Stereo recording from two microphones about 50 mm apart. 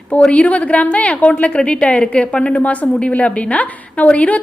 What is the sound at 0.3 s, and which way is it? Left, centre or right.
A woman's voice, left.